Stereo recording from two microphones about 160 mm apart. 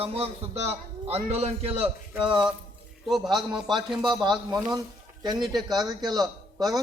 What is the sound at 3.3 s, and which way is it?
Speech, 5° right (ahead or behind).